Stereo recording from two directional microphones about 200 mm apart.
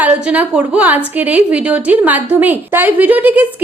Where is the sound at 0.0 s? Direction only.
10° right (ahead or behind).